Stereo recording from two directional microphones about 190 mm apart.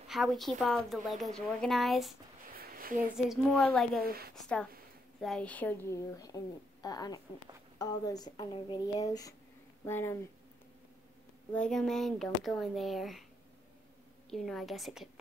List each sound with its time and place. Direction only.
0.1 s a woman's voice: centre (ahead or behind)
2.5 s a sound: 50° right (ahead or behind)
3.2 s a woman's voice: centre (ahead or behind)
4.0 s a woman's voice: 50° right (ahead or behind)
4.4 s a woman's voice: 5° left (ahead or behind)
11.5 s a woman's voice: 5° left (ahead or behind)
14.3 s a woman's voice: centre (ahead or behind)